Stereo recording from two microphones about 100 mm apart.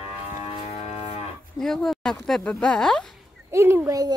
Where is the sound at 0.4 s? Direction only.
90° left.